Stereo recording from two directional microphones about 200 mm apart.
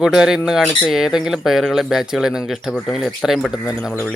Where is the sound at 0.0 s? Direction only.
Centre (ahead or behind).